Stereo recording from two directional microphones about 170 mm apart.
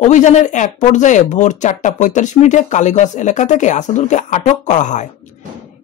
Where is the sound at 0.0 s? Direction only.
45° left (ahead or behind).